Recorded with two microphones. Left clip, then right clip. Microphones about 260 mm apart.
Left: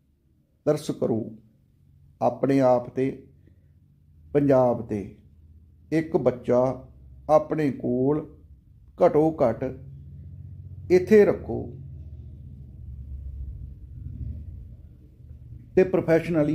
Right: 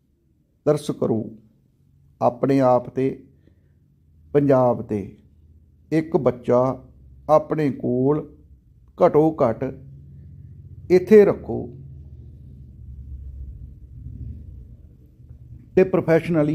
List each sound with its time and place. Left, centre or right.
0.7 s speech: right
4.3 s speech: right
5.9 s speech: right
10.9 s speech: right
15.7 s speech: right